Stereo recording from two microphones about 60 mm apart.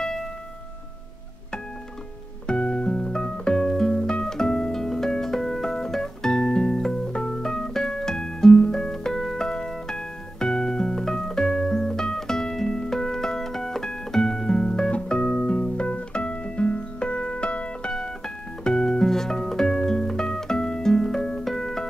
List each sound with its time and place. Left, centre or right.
0.0 s music: centre
2.4 s music: centre